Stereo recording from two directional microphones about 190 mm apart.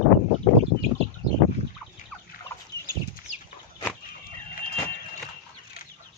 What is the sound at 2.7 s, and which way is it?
Chicken, 20° right (ahead or behind).